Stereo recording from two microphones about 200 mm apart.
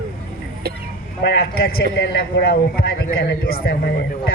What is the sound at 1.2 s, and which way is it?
A man's voice, 55° left (ahead or behind).